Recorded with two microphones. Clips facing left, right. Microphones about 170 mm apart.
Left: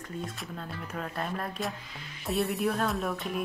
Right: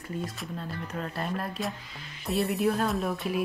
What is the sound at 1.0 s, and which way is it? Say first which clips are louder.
A woman's voice: right 1 dB; centre (ahead or behind).